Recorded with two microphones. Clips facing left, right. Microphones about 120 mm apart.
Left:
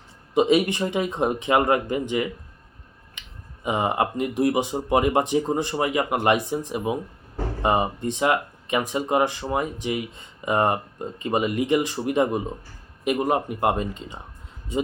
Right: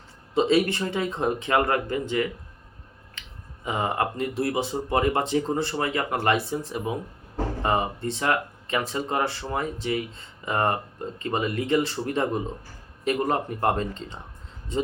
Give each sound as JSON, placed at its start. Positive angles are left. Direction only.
{"t": 0.3, "sound": "speech", "side_deg": 15}